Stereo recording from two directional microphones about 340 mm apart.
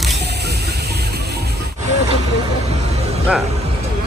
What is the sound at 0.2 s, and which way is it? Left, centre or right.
Music, right.